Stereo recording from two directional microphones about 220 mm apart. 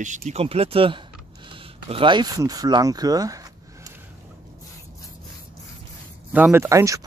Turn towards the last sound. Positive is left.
turn(degrees=-15)  # may be behind; listen again after turning